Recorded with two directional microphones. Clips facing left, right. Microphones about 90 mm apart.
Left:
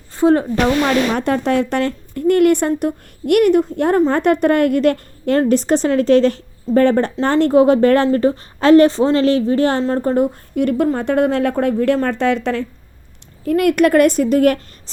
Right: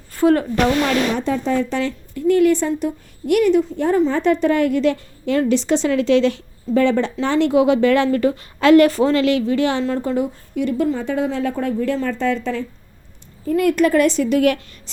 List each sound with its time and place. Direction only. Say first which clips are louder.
0.1 s speech: left 2 dB; 25° left (ahead or behind)
1.1 s a woman's voice: left 3 dB; 60° left (ahead or behind); by 14.6 s 45° left (ahead or behind)